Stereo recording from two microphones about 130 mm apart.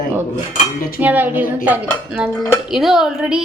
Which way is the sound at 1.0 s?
15° right (ahead or behind).